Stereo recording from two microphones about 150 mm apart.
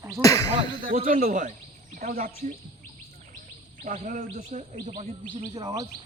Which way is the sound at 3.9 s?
55° right (ahead or behind).